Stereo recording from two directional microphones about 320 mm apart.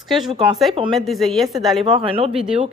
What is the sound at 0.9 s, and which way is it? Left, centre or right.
A woman's voice, centre.